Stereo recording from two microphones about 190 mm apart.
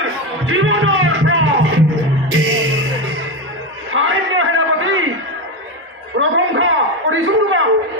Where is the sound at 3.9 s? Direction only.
90° right.